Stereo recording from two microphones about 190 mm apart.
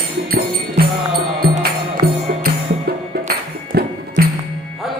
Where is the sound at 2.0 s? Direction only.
50° right (ahead or behind).